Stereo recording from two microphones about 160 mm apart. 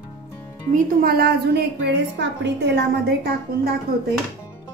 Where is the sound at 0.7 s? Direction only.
65° right (ahead or behind); by 2.8 s 90° right.